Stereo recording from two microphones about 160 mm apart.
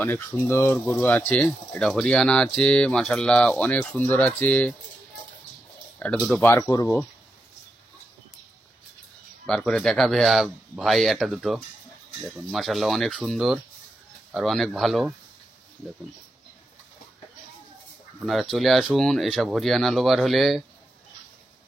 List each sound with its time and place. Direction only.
0.0 s speech: 10° left (ahead or behind)
5.9 s speech: 10° left (ahead or behind)
6.6 s speech: 20° left (ahead or behind)
9.5 s speech: 5° left (ahead or behind)
18.2 s speech: centre (ahead or behind)